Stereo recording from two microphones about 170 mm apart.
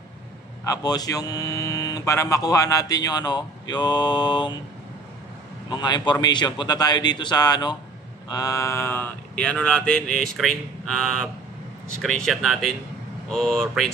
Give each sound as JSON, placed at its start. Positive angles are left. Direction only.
{"t": 0.7, "sound": "speech", "side_deg": 20}
{"t": 5.7, "sound": "speech", "side_deg": 25}